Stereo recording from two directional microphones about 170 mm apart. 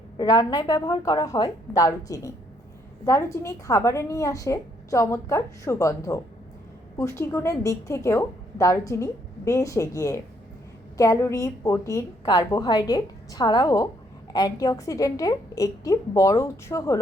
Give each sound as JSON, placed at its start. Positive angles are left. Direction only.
{"t": 0.2, "sound": "a woman's voice", "side_deg": 20}